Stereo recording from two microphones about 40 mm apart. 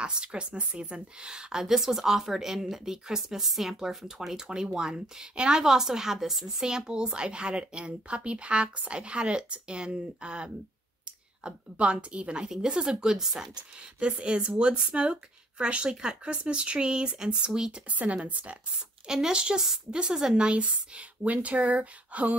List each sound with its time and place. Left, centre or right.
0.0 s a woman's voice: right
5.6 s a woman's voice: centre
13.9 s a woman's voice: right
17.8 s speech: right
19.0 s speech: centre
20.3 s speech: right